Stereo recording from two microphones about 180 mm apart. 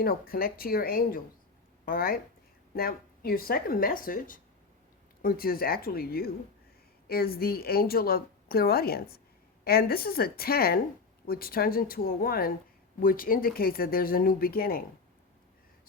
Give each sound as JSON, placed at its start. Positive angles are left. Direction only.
{"t": 0.0, "sound": "a woman's voice", "side_deg": 55}